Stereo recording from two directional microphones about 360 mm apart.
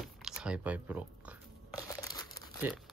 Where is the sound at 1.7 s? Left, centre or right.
Centre.